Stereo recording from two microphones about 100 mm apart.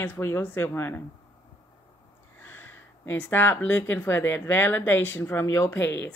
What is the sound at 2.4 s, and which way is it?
Speech, 20° left (ahead or behind).